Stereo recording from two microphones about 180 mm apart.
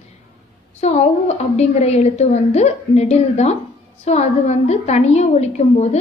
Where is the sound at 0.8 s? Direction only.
40° left (ahead or behind).